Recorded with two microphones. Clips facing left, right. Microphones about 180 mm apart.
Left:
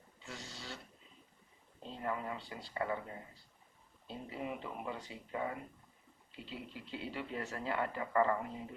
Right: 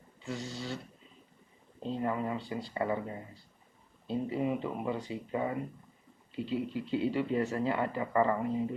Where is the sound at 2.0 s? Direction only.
20° right (ahead or behind).